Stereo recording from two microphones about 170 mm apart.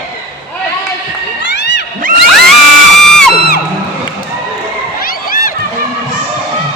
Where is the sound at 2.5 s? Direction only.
Centre (ahead or behind).